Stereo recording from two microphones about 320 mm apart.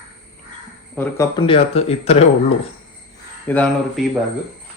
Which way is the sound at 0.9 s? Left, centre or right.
Centre.